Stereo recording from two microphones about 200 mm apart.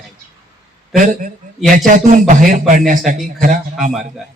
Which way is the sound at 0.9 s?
40° right (ahead or behind).